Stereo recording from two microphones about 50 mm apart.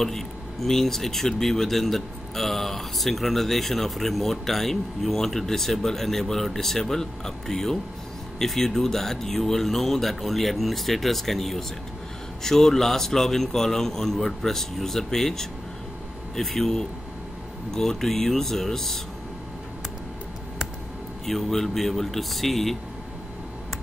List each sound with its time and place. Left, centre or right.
0.0 s a man's voice: centre
21.3 s speech: centre